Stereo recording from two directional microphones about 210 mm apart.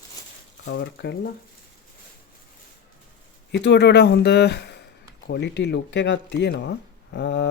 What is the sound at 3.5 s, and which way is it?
Speech, 55° left (ahead or behind).